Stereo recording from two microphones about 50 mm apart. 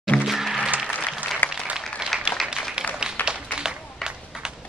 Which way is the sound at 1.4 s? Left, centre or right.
Left.